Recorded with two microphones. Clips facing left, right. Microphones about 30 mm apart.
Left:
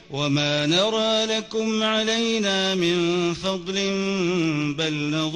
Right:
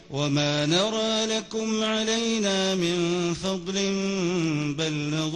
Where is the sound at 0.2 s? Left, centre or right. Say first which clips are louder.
Left 2 dB; centre.